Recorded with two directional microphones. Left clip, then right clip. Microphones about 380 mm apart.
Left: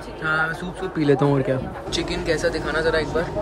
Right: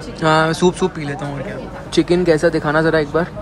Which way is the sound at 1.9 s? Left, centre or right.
Centre.